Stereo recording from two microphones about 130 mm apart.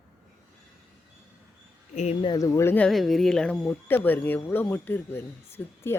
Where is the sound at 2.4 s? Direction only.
20° left (ahead or behind).